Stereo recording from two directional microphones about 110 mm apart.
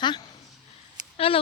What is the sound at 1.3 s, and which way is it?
Speech, 55° left (ahead or behind).